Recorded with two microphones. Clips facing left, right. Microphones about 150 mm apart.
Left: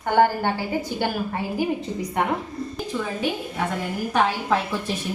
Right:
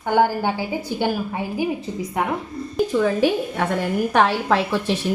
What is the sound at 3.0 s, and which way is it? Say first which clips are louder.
Speech: right 8 dB; 70° right (ahead or behind).